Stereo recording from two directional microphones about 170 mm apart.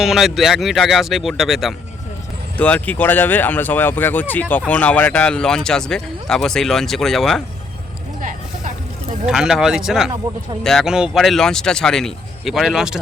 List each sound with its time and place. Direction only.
0.0 s speech: centre (ahead or behind)
8.2 s a sound: 50° right (ahead or behind)
9.2 s speech: 5° right (ahead or behind)